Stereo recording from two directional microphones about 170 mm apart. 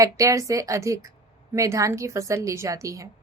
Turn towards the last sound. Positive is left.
turn(degrees=-20)  # may be behind; listen again after turning